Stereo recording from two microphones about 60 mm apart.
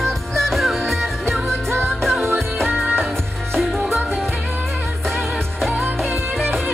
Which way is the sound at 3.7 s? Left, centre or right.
Right.